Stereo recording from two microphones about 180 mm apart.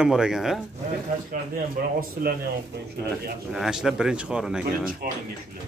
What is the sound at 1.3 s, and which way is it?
Speech, 55° right (ahead or behind).